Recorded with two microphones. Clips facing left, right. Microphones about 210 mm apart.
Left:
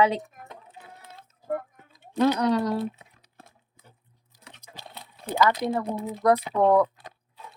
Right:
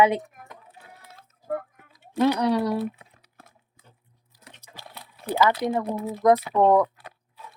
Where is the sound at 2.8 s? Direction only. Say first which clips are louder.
Right 1 dB; 25° left (ahead or behind).